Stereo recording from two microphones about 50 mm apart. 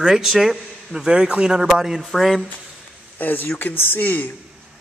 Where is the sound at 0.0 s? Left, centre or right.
Centre.